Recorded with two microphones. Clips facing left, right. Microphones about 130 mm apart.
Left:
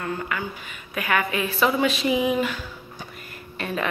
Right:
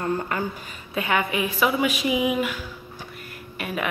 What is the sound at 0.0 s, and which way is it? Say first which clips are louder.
Speech: right 3 dB; 40° right (ahead or behind).